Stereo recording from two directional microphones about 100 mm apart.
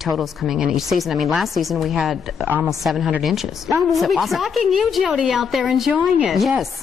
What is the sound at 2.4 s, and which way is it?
Speech, 20° right (ahead or behind).